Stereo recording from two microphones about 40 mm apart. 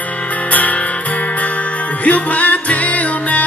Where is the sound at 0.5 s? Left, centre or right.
Left.